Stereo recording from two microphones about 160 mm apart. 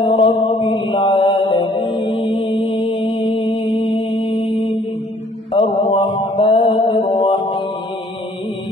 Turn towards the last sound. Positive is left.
turn(degrees=30)  # may be behind; listen again after turning